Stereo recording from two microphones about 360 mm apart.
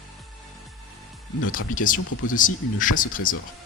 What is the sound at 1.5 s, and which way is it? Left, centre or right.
Speech, left.